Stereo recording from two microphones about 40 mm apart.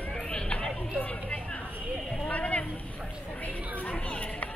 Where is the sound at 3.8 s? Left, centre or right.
Left.